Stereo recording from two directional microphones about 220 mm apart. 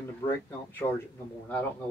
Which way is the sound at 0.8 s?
20° left (ahead or behind).